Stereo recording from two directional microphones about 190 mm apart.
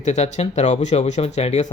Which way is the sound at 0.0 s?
35° left (ahead or behind).